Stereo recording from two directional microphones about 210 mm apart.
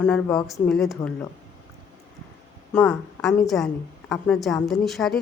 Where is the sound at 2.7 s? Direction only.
5° left (ahead or behind).